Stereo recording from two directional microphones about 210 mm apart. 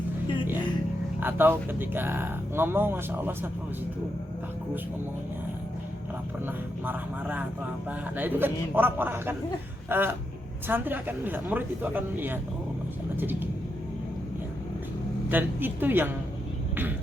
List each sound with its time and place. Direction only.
1.2 s speech: 10° right (ahead or behind)
6.4 s speech: 10° right (ahead or behind)
15.3 s speech: 10° right (ahead or behind)